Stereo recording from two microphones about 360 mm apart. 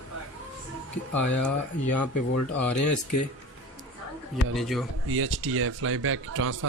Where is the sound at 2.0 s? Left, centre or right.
Left.